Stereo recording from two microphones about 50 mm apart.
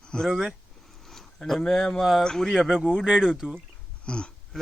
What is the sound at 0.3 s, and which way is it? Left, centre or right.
Speech, centre.